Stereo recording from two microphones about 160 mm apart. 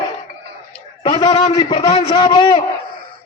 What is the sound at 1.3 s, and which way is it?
A man's voice, 45° left (ahead or behind).